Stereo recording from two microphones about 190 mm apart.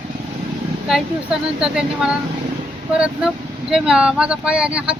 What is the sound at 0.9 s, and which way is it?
Speech, centre (ahead or behind).